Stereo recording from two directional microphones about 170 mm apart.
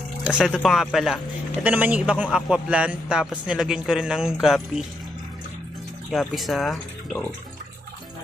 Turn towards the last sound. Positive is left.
turn(degrees=0)  # may be behind; listen again after turning